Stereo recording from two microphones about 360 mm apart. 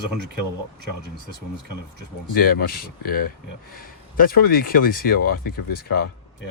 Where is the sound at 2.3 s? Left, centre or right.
Left.